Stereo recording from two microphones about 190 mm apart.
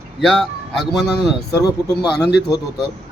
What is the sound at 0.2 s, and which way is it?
Speech, centre (ahead or behind).